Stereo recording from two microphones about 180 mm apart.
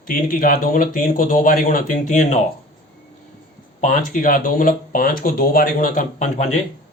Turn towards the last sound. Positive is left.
turn(degrees=40)  # may be behind; listen again after turning